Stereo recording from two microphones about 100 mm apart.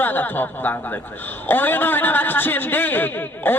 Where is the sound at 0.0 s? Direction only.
20° left (ahead or behind).